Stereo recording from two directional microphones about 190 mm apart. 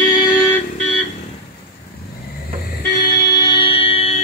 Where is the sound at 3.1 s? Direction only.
20° left (ahead or behind).